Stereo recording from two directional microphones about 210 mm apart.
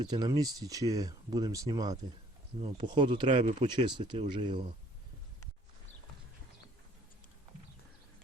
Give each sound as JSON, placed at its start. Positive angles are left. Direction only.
{"t": 0.0, "sound": "speech", "side_deg": -20}
{"t": 3.2, "sound": "speech", "side_deg": -35}
{"t": 3.6, "sound": "speech", "side_deg": -20}